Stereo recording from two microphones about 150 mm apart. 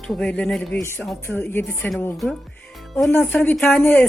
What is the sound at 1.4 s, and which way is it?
Speech, 15° left (ahead or behind).